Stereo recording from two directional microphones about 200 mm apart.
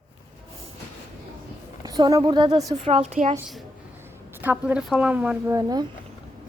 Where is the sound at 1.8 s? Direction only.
20° right (ahead or behind).